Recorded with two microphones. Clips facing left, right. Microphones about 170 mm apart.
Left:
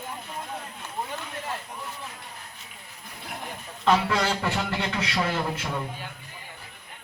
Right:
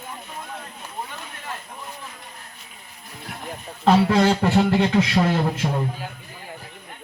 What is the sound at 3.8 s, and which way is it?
Speech, 45° right (ahead or behind).